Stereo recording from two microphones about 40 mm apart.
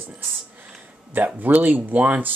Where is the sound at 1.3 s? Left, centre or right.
Right.